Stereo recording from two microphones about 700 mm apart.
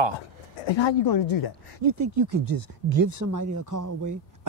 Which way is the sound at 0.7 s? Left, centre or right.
Left.